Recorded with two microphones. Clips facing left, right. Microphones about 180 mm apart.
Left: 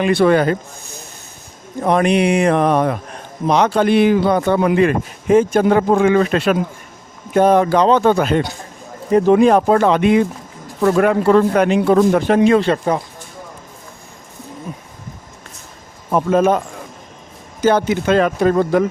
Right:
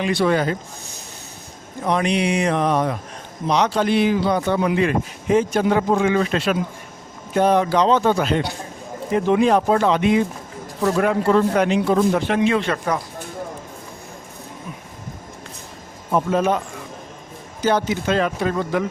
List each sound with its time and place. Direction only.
0.0 s a man's voice: 55° left (ahead or behind)
1.8 s a man's voice: 55° left (ahead or behind)
12.3 s speech: 40° left (ahead or behind)
16.1 s speech: 50° left (ahead or behind)